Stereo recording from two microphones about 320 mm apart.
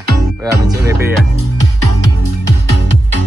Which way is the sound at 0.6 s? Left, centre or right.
Centre.